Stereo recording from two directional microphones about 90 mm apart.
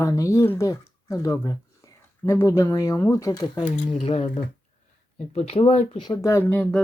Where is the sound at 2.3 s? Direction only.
30° left (ahead or behind).